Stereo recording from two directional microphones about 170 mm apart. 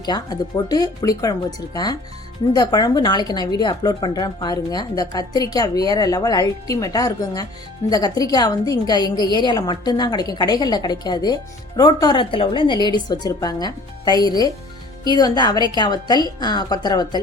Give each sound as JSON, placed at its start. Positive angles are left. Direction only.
{"t": 0.0, "sound": "speech", "side_deg": 25}